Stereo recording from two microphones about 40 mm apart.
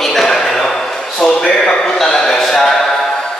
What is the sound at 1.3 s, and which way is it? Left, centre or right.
A man's voice, centre.